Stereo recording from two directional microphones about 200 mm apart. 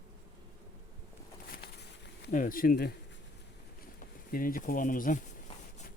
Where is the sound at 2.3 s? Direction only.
40° left (ahead or behind).